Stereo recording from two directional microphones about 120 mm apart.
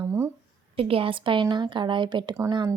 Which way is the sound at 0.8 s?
50° right (ahead or behind).